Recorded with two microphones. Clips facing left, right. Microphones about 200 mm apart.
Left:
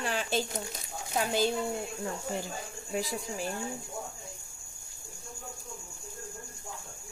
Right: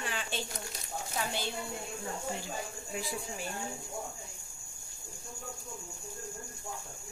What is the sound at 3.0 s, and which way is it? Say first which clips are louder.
Speech: left 5 dB; 40° left (ahead or behind).